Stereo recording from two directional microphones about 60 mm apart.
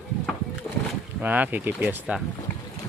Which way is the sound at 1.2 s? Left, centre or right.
Right.